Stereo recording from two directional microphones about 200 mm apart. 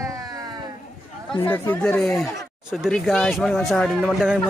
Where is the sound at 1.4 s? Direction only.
10° left (ahead or behind).